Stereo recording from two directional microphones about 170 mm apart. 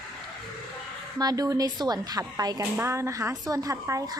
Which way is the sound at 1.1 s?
20° right (ahead or behind).